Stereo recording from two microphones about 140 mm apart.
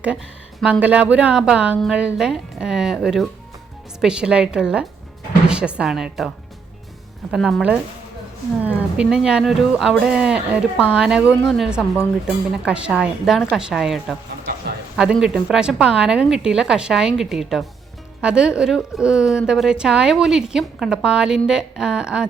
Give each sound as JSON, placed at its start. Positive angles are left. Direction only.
{"t": 0.6, "sound": "a woman's voice", "side_deg": -10}